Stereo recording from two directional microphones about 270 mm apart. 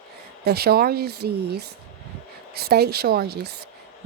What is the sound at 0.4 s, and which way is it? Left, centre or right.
Speech, right.